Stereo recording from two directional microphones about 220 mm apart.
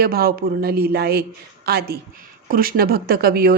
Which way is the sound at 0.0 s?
45° right (ahead or behind).